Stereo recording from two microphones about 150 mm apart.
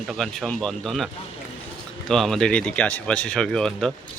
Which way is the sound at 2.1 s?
Centre (ahead or behind).